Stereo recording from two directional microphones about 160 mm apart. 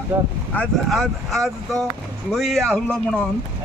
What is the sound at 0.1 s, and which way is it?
Speech, 15° right (ahead or behind).